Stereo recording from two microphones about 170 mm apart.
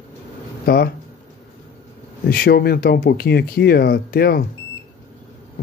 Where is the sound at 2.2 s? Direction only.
60° left (ahead or behind).